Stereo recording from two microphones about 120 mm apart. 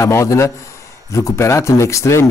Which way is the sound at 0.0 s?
25° left (ahead or behind).